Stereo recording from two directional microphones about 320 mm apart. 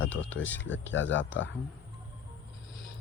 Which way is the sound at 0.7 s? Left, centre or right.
Left.